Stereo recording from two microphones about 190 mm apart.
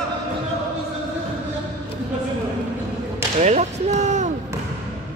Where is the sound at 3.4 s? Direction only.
35° right (ahead or behind).